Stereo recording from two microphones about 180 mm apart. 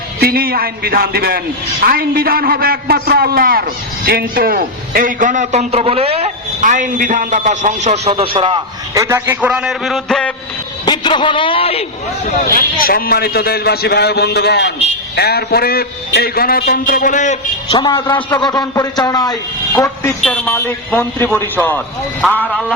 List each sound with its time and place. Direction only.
0.2 s a man's voice: 55° right (ahead or behind); by 9.0 s 25° right (ahead or behind)
9.0 s a man's voice: 15° right (ahead or behind); by 10.3 s 5° left (ahead or behind)
10.8 s a man's voice: 25° left (ahead or behind)
12.8 s a man's voice: 55° left (ahead or behind)
17.7 s a man's voice: 25° left (ahead or behind)
20.1 s a man's voice: 5° left (ahead or behind)
22.2 s a man's voice: centre (ahead or behind)